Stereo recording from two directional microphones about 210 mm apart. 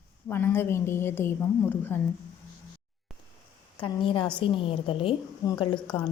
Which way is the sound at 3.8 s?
25° left (ahead or behind).